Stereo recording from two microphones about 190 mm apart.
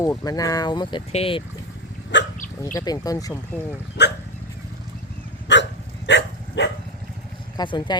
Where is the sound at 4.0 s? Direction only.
60° left (ahead or behind).